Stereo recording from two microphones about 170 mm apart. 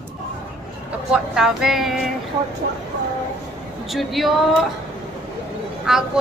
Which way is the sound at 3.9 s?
Centre (ahead or behind).